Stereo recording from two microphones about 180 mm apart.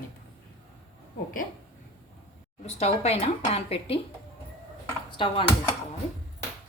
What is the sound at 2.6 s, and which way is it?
Speech, 35° left (ahead or behind).